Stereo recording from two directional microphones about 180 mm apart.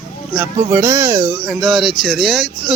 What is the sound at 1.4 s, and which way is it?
Speech, centre (ahead or behind).